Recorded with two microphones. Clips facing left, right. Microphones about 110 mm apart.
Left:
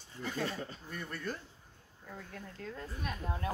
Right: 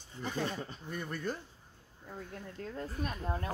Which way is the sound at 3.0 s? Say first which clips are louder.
Right 2 dB; 40° right (ahead or behind).